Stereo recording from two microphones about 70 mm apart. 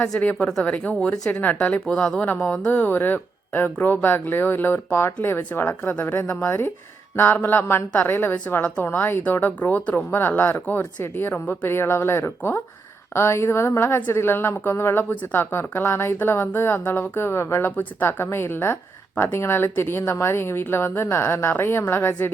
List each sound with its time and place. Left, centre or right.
0.2 s speech: left
1.3 s speech: left
1.7 s speech: centre
2.6 s a woman's voice: left